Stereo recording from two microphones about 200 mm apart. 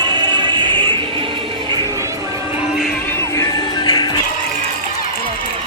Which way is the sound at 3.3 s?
20° left (ahead or behind).